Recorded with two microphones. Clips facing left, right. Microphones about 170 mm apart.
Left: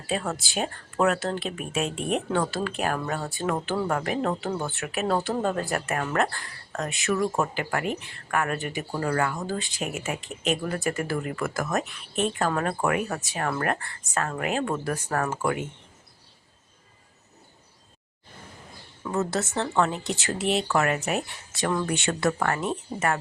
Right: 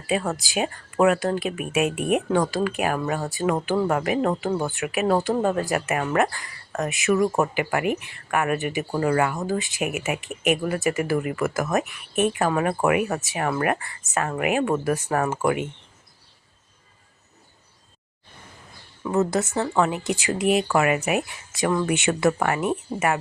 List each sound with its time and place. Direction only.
0.3 s speech: centre (ahead or behind)
4.8 s speech: centre (ahead or behind)
7.1 s speech: 15° right (ahead or behind)
19.0 s speech: 15° right (ahead or behind)
19.5 s speech: centre (ahead or behind)
19.7 s speech: 10° right (ahead or behind)
21.8 s speech: 20° right (ahead or behind)